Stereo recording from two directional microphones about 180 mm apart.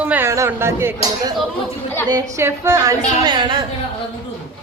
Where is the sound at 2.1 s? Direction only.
20° right (ahead or behind).